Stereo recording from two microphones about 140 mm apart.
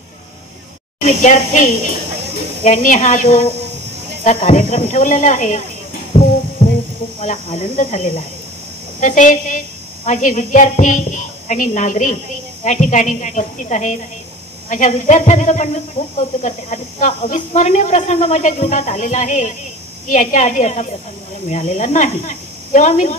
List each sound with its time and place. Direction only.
1.0 s speech: 60° left (ahead or behind)
6.1 s music: 50° left (ahead or behind)
7.2 s speech: 50° left (ahead or behind)